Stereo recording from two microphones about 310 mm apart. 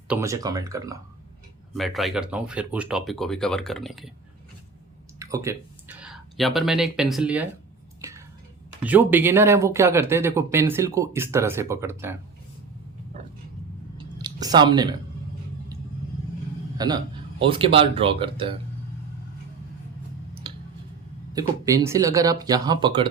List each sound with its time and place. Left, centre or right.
0.1 s speech: centre
1.7 s speech: centre
5.2 s speech: centre
8.8 s speech: centre
14.2 s a sound: centre
16.7 s a man's voice: centre
20.4 s a sound: centre
21.3 s speech: centre